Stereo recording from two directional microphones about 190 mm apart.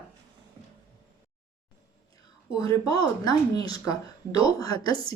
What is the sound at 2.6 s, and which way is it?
Speech, 20° left (ahead or behind).